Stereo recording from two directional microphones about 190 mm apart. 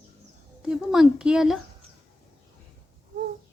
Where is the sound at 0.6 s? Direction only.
Centre (ahead or behind).